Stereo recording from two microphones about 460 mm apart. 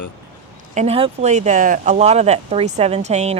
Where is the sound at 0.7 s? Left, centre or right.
Centre.